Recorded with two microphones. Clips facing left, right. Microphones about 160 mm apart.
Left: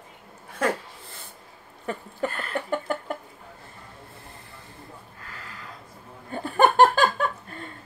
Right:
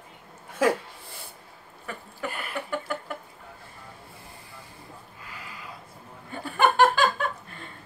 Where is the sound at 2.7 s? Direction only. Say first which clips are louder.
Left 5 dB; 45° left (ahead or behind).